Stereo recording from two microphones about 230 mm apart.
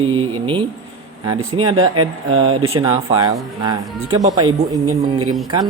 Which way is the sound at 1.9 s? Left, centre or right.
Right.